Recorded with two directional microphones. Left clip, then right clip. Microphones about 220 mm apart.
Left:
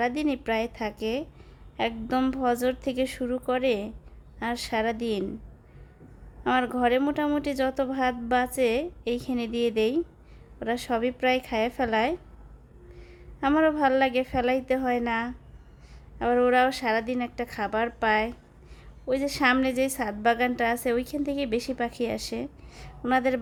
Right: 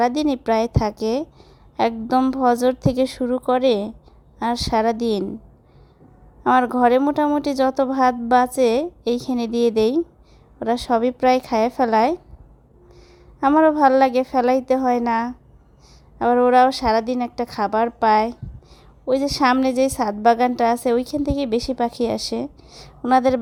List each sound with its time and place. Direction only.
0.0 s a woman's voice: 20° right (ahead or behind)
6.7 s a woman's voice: 20° right (ahead or behind)